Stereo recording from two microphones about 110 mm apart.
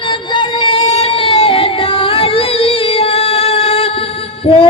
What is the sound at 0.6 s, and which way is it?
Singing, 55° left (ahead or behind).